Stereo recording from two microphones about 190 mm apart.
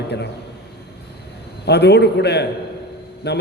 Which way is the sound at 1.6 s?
60° left (ahead or behind).